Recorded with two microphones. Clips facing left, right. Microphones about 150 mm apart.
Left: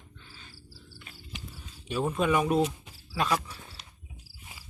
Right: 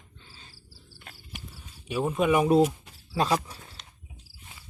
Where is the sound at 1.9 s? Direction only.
10° right (ahead or behind).